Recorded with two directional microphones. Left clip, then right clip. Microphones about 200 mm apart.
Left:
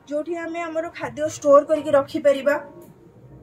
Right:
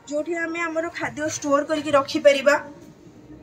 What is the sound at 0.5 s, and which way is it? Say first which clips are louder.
Speech: right 1 dB; 55° left (ahead or behind).